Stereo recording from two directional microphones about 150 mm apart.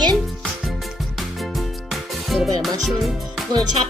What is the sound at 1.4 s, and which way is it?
Music, centre (ahead or behind).